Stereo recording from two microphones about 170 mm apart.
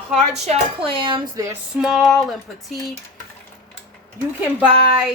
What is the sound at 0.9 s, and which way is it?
Speech, 30° right (ahead or behind).